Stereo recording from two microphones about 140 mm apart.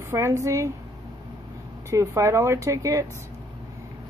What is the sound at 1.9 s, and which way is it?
A woman's voice, 20° right (ahead or behind).